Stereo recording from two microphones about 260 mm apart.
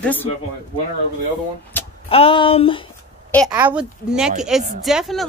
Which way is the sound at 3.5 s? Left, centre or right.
Centre.